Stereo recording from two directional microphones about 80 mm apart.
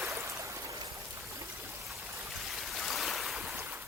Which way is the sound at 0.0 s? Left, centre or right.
Right.